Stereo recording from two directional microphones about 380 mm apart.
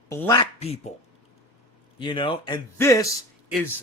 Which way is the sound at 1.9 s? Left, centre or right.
Centre.